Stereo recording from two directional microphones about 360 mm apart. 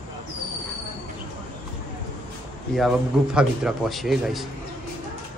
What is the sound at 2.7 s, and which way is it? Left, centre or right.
A man's voice, centre.